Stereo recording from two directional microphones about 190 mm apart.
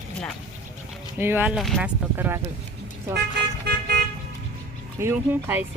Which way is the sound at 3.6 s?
60° right (ahead or behind).